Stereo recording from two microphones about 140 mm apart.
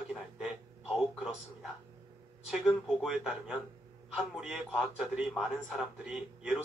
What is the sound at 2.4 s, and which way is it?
A man's voice, 5° right (ahead or behind).